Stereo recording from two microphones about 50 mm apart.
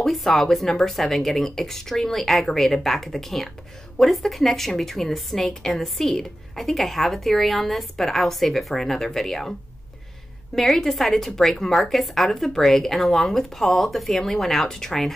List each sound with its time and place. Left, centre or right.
0.0 s a woman's voice: centre